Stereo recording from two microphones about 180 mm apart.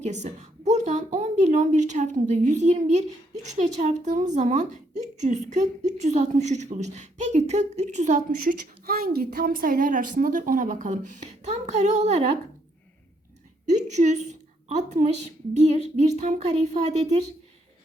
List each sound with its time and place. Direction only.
0.0 s a woman's voice: 40° right (ahead or behind)
13.7 s a woman's voice: 40° right (ahead or behind)